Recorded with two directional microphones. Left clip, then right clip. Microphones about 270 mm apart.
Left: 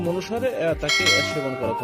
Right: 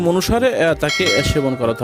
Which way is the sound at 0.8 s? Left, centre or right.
Centre.